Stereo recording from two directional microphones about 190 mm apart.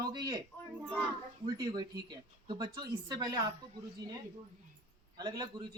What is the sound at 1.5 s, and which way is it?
Speech, 20° right (ahead or behind).